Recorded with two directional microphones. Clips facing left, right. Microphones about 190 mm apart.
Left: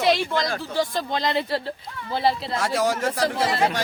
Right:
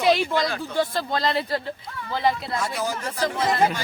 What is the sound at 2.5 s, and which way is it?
Speech, 90° left.